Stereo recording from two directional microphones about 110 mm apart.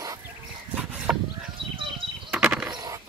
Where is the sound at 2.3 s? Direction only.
15° right (ahead or behind).